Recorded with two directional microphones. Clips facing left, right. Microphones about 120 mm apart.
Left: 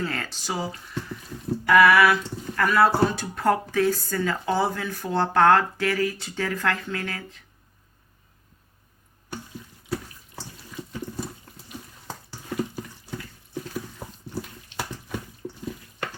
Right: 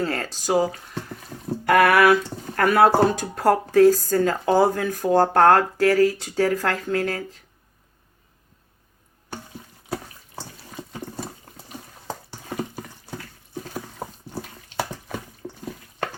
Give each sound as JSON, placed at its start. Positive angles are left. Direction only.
{"t": 0.0, "sound": "speech", "side_deg": -35}
{"t": 1.6, "sound": "a sound", "side_deg": -55}
{"t": 2.6, "sound": "speech", "side_deg": -55}